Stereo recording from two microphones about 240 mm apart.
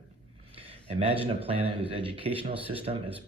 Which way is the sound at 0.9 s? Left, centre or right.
Right.